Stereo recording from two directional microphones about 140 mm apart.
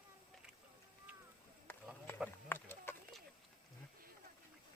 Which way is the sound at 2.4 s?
15° left (ahead or behind).